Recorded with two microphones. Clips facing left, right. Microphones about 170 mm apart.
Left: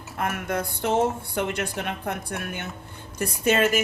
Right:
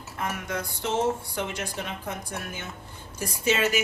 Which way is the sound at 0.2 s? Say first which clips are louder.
Left 4 dB; 55° left (ahead or behind).